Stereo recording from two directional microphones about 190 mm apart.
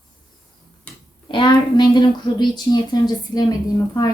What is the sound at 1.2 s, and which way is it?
Speech, 25° left (ahead or behind).